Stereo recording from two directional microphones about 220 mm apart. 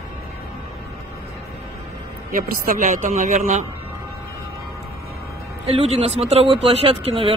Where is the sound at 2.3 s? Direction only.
40° right (ahead or behind).